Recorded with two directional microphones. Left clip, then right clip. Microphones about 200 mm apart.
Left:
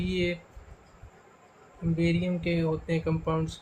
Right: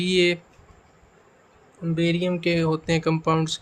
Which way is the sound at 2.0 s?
55° right (ahead or behind).